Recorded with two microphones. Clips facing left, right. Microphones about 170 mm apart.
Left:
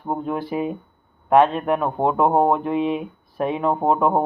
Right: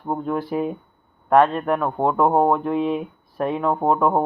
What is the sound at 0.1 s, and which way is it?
Speech, 10° left (ahead or behind).